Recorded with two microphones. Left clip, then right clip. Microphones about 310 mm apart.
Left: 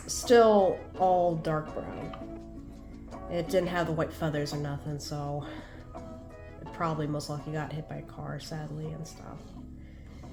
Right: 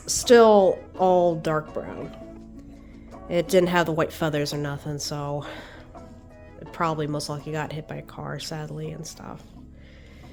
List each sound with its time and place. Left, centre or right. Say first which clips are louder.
0.0 s speech: right 6 dB; right
1.6 s speech: right 5 dB; centre
3.2 s speech: right 8 dB; right
6.7 s speech: right 6 dB; right